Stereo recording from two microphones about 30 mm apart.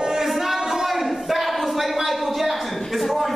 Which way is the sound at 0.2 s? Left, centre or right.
Centre.